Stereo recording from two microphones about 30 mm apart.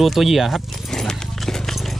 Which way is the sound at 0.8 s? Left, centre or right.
Centre.